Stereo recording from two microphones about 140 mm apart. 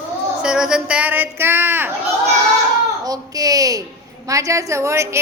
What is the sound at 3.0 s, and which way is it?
A woman's voice, 25° right (ahead or behind).